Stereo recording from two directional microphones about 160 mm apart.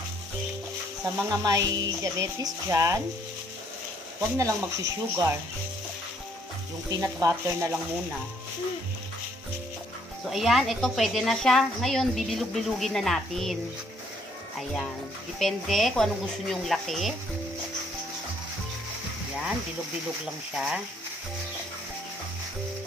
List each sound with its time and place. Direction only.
1.0 s speech: 20° right (ahead or behind)
4.2 s speech: 20° right (ahead or behind)
6.9 s speech: 20° right (ahead or behind)
10.2 s a woman's voice: centre (ahead or behind)
15.3 s a woman's voice: centre (ahead or behind)